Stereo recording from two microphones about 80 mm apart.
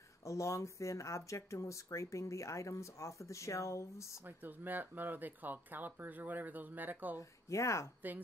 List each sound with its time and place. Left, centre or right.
0.2 s speech: left
4.4 s speech: right
7.2 s speech: left